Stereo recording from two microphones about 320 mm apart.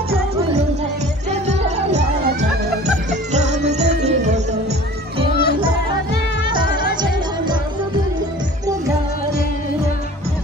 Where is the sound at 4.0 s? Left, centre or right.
Right.